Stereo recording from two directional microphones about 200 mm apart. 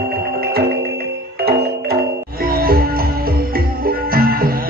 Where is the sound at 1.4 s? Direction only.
50° right (ahead or behind).